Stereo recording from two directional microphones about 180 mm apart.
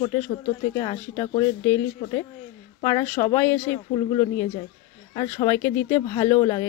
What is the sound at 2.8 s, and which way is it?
Speech, 20° left (ahead or behind).